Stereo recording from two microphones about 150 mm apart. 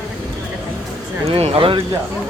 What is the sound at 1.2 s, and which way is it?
Speech, 45° right (ahead or behind).